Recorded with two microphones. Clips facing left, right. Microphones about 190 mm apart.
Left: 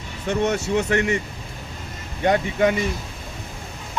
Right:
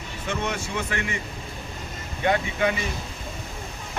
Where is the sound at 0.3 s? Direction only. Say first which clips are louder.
Left 8 dB; 40° left (ahead or behind).